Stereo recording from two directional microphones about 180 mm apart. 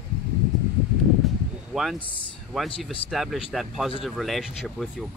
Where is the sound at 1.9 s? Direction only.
30° left (ahead or behind).